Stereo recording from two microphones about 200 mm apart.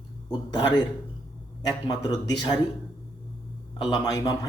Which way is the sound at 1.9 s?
20° left (ahead or behind).